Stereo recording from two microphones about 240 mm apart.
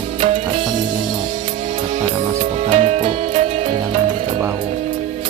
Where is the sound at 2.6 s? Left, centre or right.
Right.